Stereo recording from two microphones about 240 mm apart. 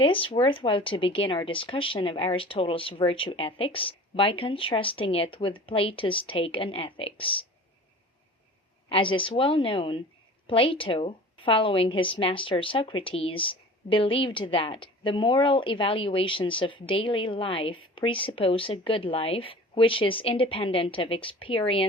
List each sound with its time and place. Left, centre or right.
0.0 s a woman's voice: left
8.9 s a woman's voice: left